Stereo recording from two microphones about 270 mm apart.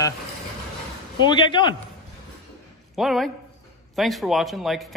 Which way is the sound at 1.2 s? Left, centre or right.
Centre.